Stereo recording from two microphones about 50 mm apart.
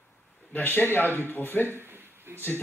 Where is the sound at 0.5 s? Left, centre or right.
Left.